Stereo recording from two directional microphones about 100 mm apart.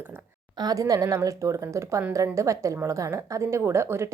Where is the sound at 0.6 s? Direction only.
40° right (ahead or behind).